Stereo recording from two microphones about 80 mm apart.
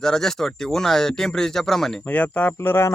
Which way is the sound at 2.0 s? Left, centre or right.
Centre.